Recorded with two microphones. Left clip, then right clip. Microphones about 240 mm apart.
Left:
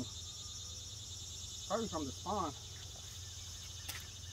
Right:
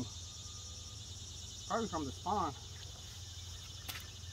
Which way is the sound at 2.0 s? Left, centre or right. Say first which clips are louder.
Right 1 dB; left.